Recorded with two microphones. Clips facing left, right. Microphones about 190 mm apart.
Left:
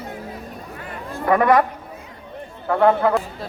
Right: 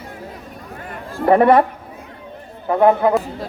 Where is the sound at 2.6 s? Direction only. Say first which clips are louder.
Right 2 dB; 20° right (ahead or behind).